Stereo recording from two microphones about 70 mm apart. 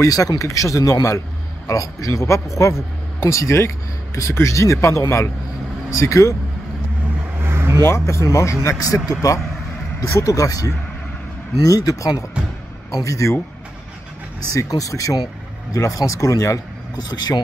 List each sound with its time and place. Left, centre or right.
0.0 s speech: left
7.4 s vehicle: right
7.8 s speech: left
10.0 s speech: left
14.5 s speech: left